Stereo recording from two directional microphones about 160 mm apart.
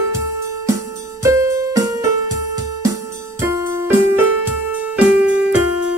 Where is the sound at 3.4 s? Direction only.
15° right (ahead or behind).